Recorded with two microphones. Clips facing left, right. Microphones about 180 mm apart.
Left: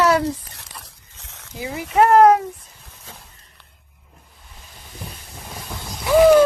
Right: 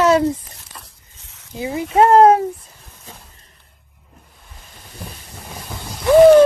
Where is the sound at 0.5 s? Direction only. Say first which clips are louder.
Even; 80° left.